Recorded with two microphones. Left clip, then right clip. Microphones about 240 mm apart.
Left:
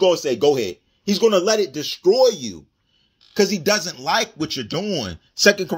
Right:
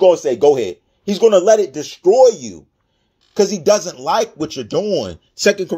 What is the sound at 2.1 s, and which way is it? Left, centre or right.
Speech, left.